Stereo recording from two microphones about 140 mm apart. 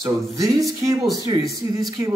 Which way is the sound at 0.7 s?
20° right (ahead or behind).